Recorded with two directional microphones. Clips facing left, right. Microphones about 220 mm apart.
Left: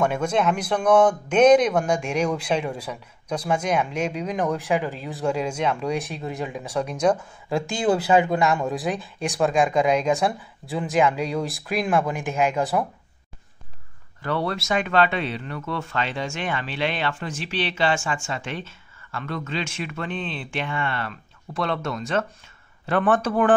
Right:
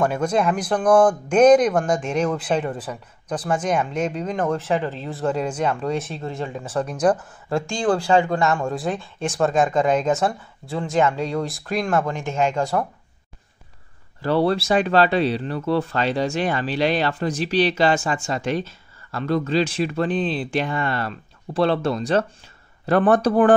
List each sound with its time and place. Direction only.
0.0 s speech: centre (ahead or behind)
0.8 s speech: 5° left (ahead or behind)
2.3 s speech: 5° right (ahead or behind)
2.7 s speech: 10° left (ahead or behind)
5.6 s speech: 5° right (ahead or behind)
5.9 s speech: 15° left (ahead or behind)
6.8 s speech: 5° left (ahead or behind)
8.0 s speech: 20° left (ahead or behind)
8.5 s speech: centre (ahead or behind)
9.5 s speech: 10° left (ahead or behind)
10.2 s speech: centre (ahead or behind)
14.2 s speech: 30° right (ahead or behind)